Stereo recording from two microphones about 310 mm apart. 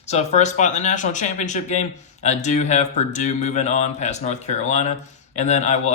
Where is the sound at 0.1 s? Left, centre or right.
Left.